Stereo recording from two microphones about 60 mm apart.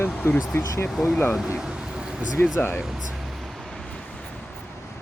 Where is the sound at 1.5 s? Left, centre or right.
Centre.